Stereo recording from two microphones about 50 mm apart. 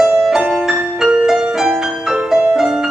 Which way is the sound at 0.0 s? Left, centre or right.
Centre.